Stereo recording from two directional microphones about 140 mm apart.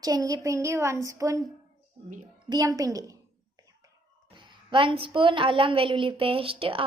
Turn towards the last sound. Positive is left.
turn(degrees=-40)  # may be behind; listen again after turning